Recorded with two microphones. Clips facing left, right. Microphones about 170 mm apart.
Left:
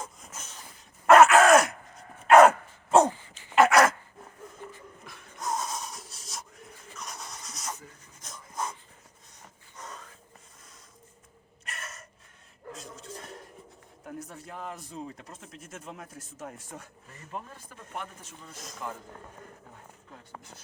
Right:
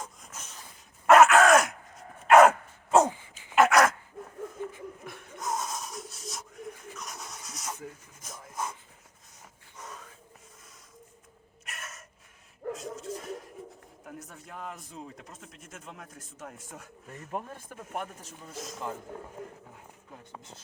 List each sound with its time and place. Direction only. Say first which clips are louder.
0.0 s a sound: left 1 dB; centre (ahead or behind)
1.0 s groan: left 1 dB; centre (ahead or behind)
2.2 s dog: left 1 dB; centre (ahead or behind)
3.1 s dog: left 1 dB; 15° right (ahead or behind)
3.5 s dog: left 1 dB; centre (ahead or behind)
5.4 s a sound: left 1 dB; centre (ahead or behind)
8.2 s dog: left 1 dB; 5° right (ahead or behind)
9.7 s a sound: left 1 dB; 5° right (ahead or behind)
11.6 s gasp: left 2 dB; centre (ahead or behind)
12.7 s a sound: right 6 dB; centre (ahead or behind)
14.0 s speech: left 5 dB; centre (ahead or behind)
17.3 s speech: right 3 dB; 50° right (ahead or behind)
18.3 s speech: right 6 dB; centre (ahead or behind)
18.7 s speech: right 1 dB; 20° right (ahead or behind)